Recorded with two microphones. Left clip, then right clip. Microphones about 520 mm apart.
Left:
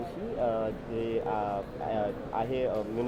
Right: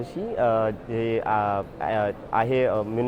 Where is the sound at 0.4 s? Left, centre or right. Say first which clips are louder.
Right 8 dB; right.